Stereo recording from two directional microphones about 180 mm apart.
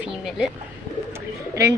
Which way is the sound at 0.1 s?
5° right (ahead or behind).